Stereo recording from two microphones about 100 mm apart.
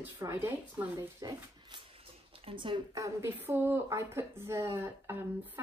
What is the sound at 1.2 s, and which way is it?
Speech, 40° right (ahead or behind).